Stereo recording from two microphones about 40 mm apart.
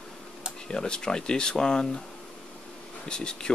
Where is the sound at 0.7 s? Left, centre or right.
Centre.